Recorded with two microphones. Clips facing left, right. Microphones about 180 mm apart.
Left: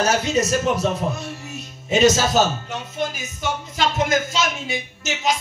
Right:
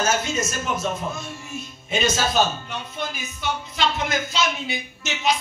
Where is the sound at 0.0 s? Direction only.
35° left (ahead or behind).